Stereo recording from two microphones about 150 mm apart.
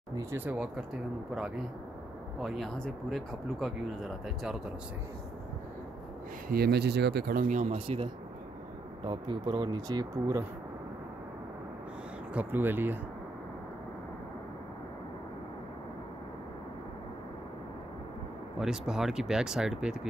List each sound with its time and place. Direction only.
0.1 s speech: 20° right (ahead or behind)
2.4 s speech: centre (ahead or behind)
6.5 s speech: 90° right; by 7.7 s 55° right (ahead or behind)
7.7 s speech: 40° right (ahead or behind)
12.4 s speech: 15° right (ahead or behind)
18.6 s speech: 5° right (ahead or behind)